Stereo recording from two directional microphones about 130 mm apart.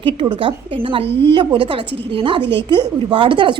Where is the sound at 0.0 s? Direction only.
40° right (ahead or behind).